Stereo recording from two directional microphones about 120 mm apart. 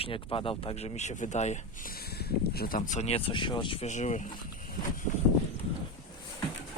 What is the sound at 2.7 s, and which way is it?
Speech, 80° left.